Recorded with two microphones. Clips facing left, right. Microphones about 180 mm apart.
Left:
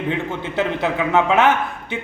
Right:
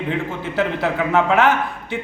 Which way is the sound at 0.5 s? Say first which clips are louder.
Even; 20° left (ahead or behind).